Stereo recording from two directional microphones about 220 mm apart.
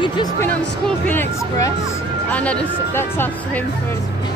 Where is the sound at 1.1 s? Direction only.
10° left (ahead or behind).